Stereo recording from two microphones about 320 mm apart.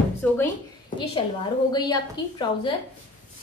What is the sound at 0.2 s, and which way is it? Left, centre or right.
Speech, centre.